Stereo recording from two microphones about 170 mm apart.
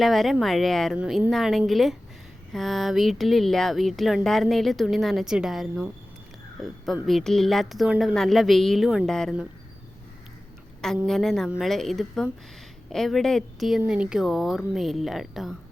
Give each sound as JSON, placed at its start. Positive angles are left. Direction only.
{"t": 0.0, "sound": "speech", "side_deg": 0}
{"t": 7.1, "sound": "speech", "side_deg": 0}
{"t": 11.0, "sound": "speech", "side_deg": 0}